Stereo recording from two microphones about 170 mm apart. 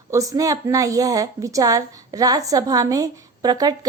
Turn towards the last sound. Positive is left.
turn(degrees=-20)  # may be behind; listen again after turning